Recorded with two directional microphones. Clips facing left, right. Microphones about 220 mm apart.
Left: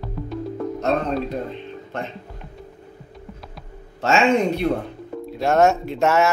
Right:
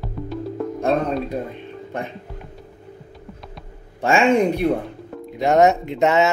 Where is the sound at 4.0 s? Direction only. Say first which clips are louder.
Right 2 dB; 15° right (ahead or behind).